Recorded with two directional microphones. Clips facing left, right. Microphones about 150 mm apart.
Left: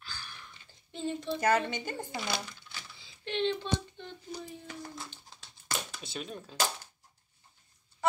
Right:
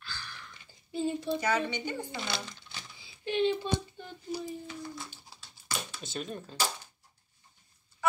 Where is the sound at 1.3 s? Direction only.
45° left (ahead or behind).